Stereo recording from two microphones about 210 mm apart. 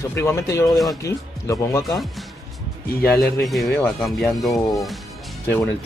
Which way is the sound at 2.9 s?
45° left (ahead or behind).